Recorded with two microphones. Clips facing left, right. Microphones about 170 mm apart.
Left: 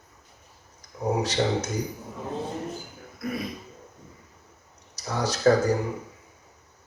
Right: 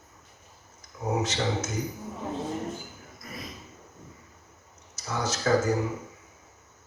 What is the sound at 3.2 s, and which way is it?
Burping, 65° left (ahead or behind).